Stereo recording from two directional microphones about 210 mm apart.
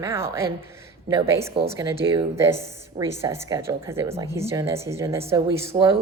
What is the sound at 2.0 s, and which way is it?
Speech, 25° right (ahead or behind).